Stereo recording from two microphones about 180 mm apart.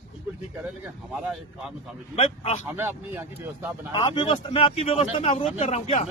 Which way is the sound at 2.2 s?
35° left (ahead or behind).